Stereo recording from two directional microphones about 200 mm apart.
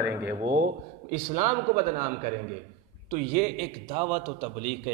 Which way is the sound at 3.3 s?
40° right (ahead or behind).